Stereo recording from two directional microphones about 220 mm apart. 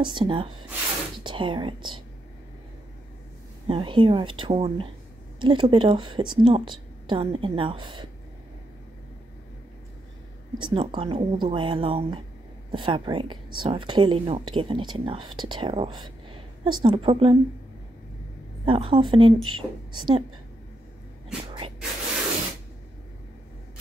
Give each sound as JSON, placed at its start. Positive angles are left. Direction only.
{"t": 0.0, "sound": "a woman's voice", "side_deg": -20}
{"t": 3.6, "sound": "a woman's voice", "side_deg": -25}
{"t": 10.6, "sound": "a woman's voice", "side_deg": -20}
{"t": 18.7, "sound": "a woman's voice", "side_deg": -25}
{"t": 21.5, "sound": "a sound", "side_deg": -25}